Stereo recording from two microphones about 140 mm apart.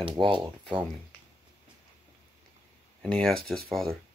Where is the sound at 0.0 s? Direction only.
35° right (ahead or behind).